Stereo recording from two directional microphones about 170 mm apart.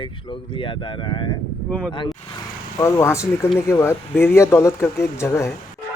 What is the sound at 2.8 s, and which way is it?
Speech, 15° left (ahead or behind).